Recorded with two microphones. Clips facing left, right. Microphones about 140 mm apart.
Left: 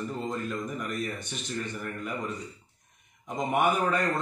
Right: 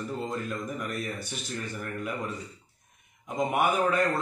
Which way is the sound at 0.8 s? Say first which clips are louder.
Left 1 dB; 5° right (ahead or behind).